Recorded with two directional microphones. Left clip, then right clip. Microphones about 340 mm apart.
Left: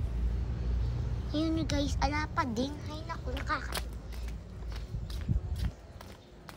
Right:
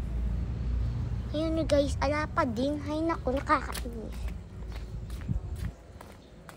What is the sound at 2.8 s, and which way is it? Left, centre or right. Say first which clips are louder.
Speech: right 11 dB; centre.